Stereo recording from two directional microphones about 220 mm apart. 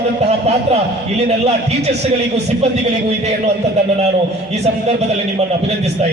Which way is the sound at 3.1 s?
30° right (ahead or behind).